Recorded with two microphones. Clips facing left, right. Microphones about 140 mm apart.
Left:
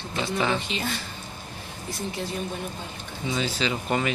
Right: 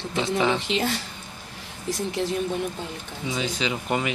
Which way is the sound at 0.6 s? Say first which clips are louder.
Right 5 dB; 80° right.